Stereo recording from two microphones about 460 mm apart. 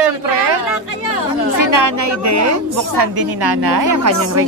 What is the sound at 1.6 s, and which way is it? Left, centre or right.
Speech, right.